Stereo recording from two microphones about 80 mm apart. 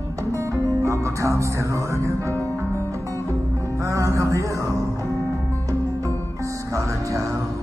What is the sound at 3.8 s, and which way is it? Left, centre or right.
Music, right.